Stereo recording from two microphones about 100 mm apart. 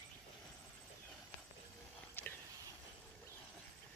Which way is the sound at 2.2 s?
20° left (ahead or behind).